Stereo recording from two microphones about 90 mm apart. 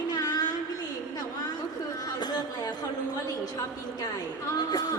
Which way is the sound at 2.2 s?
50° left (ahead or behind).